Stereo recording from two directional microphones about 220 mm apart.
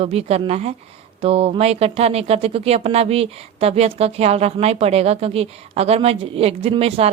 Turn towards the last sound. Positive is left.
turn(degrees=-25)  # may be behind; listen again after turning